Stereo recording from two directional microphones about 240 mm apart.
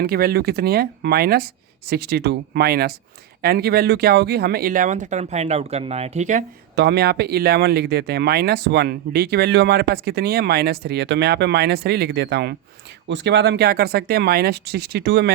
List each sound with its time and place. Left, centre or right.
0.0 s speech: right
6.7 s speech: right